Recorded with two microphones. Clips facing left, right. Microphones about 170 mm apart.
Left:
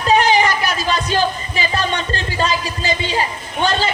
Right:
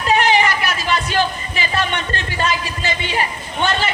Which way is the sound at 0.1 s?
40° left (ahead or behind).